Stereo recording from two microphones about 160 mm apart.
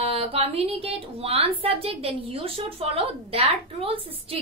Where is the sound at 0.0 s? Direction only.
40° right (ahead or behind).